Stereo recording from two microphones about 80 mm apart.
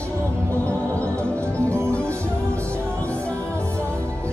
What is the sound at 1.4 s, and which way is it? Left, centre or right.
Music, right.